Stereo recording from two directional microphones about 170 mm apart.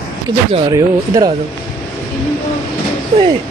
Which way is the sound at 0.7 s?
20° right (ahead or behind).